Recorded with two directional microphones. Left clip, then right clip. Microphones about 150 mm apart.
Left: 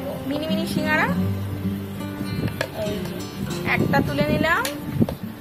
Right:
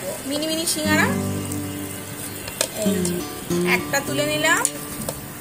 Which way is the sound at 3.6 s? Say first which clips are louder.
Even; 20° right (ahead or behind).